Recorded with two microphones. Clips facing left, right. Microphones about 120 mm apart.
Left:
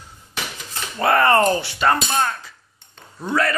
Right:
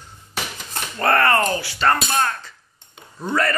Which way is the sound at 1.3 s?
25° left (ahead or behind).